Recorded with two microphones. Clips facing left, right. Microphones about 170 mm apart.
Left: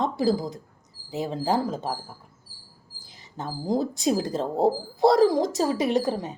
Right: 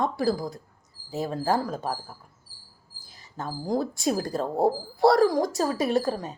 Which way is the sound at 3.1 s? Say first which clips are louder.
Even; 20° left (ahead or behind).